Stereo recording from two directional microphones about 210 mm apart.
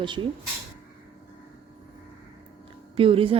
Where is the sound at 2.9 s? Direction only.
25° right (ahead or behind).